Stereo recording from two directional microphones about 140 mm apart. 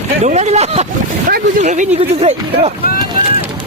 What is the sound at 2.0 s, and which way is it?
Speech, 45° right (ahead or behind).